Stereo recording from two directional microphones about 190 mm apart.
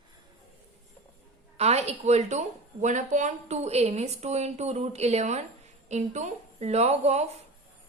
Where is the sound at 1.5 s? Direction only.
35° right (ahead or behind).